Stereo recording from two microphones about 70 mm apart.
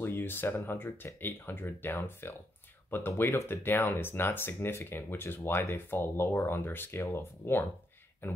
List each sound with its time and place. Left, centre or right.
0.0 s speech: left